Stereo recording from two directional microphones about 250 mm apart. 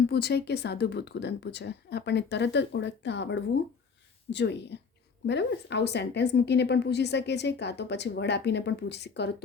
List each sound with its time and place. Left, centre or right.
0.1 s a woman's voice: left